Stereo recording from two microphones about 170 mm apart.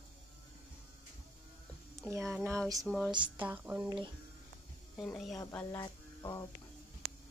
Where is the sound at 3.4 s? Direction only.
10° right (ahead or behind).